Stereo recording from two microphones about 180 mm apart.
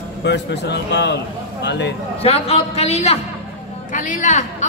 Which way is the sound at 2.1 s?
35° left (ahead or behind).